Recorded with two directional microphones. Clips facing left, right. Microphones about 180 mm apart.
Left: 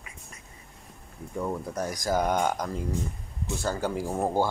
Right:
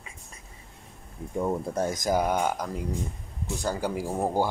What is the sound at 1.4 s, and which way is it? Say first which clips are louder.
Speech: right 4 dB; 25° right (ahead or behind).